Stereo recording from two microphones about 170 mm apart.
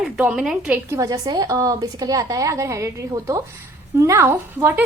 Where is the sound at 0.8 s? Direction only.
20° right (ahead or behind).